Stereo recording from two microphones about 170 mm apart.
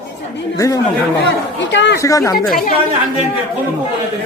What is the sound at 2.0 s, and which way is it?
Speech, 20° left (ahead or behind).